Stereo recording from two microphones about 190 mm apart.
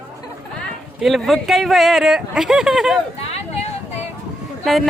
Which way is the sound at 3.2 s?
35° left (ahead or behind).